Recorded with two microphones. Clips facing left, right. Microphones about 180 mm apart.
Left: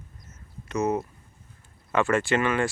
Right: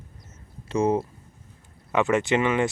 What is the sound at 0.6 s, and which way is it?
Speech, 30° right (ahead or behind).